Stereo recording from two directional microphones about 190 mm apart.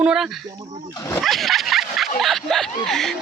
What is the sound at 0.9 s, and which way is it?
Speech, 20° left (ahead or behind).